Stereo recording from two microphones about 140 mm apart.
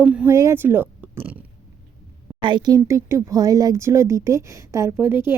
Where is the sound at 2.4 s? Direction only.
35° right (ahead or behind).